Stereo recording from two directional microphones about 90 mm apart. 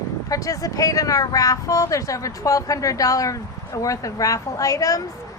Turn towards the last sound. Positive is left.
turn(degrees=40)  # may be behind; listen again after turning